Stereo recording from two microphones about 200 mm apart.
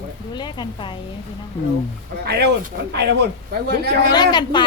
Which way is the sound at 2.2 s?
55° right (ahead or behind).